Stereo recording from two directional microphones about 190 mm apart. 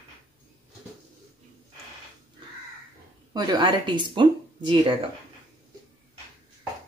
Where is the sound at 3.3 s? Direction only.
20° right (ahead or behind).